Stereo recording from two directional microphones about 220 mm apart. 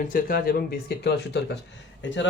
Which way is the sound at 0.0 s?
40° left (ahead or behind).